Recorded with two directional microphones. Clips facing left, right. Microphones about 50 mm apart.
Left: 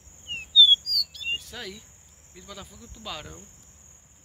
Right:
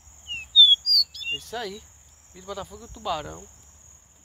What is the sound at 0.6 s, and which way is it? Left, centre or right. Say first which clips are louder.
Chirp: right 1 dB; centre.